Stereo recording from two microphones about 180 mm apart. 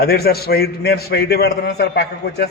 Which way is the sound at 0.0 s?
60° left (ahead or behind).